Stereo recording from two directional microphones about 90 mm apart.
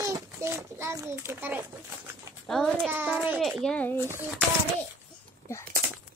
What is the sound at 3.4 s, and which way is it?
Speech, 5° left (ahead or behind).